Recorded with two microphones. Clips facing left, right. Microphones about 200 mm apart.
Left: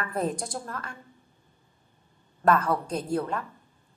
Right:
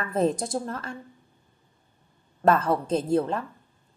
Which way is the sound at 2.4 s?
25° right (ahead or behind).